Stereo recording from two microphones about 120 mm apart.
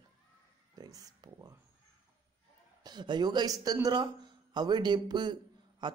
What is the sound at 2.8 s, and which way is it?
Speech, 35° right (ahead or behind).